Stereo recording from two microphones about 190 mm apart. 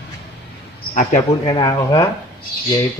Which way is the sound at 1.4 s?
20° left (ahead or behind).